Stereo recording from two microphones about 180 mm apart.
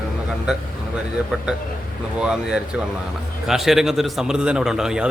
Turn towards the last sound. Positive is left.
turn(degrees=-5)  # may be behind; listen again after turning